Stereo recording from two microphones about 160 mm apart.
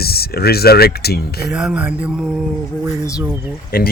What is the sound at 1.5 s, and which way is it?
Speech, 5° right (ahead or behind).